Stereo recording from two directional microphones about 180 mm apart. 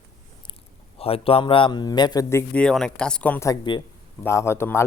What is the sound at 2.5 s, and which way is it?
A man's voice, 5° left (ahead or behind).